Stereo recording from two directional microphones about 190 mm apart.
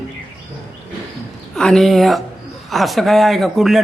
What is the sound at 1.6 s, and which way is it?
Speech, 5° left (ahead or behind).